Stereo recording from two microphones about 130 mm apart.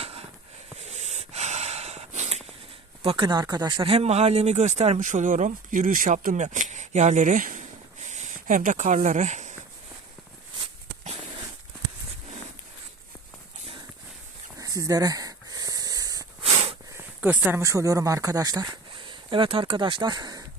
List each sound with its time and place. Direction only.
0.0 s a sound: 50° right (ahead or behind)
0.8 s snort: 60° right (ahead or behind)
3.0 s speech: 40° right (ahead or behind)
3.9 s speech: 55° right (ahead or behind)
14.6 s wheeze: 25° right (ahead or behind)
16.4 s a sound: 50° right (ahead or behind)
17.2 s speech: 10° right (ahead or behind)
17.6 s speech: 25° right (ahead or behind)